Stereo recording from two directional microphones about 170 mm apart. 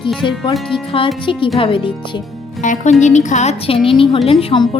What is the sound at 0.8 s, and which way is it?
Speech, 30° left (ahead or behind).